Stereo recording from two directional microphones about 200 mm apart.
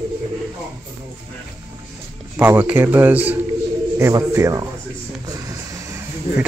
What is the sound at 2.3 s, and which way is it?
A man's voice, 10° right (ahead or behind).